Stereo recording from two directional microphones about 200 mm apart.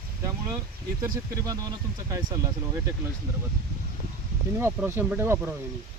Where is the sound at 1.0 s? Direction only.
15° right (ahead or behind).